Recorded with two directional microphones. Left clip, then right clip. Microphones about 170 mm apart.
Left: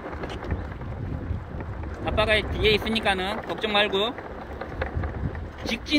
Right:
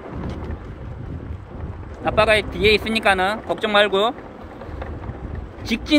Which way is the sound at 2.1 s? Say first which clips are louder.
Right 6 dB; 20° right (ahead or behind).